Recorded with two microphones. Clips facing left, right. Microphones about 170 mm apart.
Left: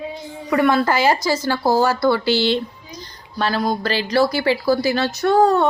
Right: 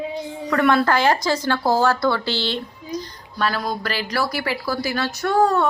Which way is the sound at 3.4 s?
30° left (ahead or behind).